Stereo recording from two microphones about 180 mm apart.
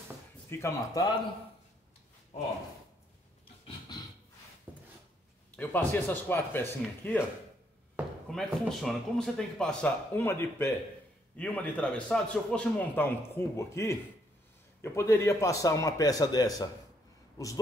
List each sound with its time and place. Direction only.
0.5 s a man's voice: 15° left (ahead or behind)
4.7 s a sound: 10° right (ahead or behind)
5.6 s a man's voice: 10° left (ahead or behind)
8.3 s a man's voice: centre (ahead or behind); by 16.6 s 20° left (ahead or behind)